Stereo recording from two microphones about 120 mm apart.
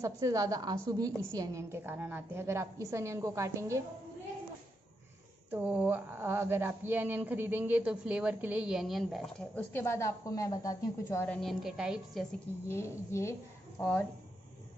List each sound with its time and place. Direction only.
0.0 s a woman's voice: 30° right (ahead or behind)
5.5 s speech: 15° right (ahead or behind)
9.4 s speech: 15° left (ahead or behind)
11.2 s a woman's voice: 5° left (ahead or behind)
11.6 s a woman's voice: 5° right (ahead or behind)
12.6 s a woman's voice: 20° left (ahead or behind)